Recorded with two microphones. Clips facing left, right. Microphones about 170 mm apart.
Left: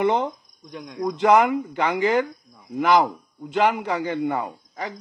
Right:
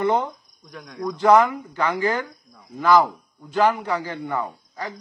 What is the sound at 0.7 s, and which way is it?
Speech, 25° left (ahead or behind).